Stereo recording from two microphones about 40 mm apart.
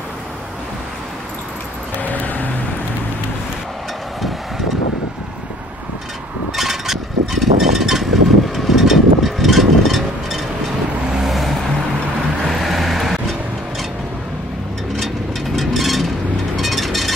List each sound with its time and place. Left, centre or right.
2.0 s vehicle: left
6.5 s vehicle: centre
15.5 s a sound: centre